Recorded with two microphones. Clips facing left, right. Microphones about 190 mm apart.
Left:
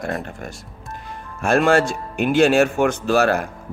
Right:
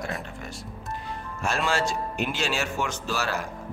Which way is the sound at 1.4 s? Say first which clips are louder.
Left 10 dB; 55° left (ahead or behind).